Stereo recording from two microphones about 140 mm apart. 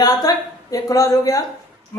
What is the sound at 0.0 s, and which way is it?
Speech, 25° left (ahead or behind).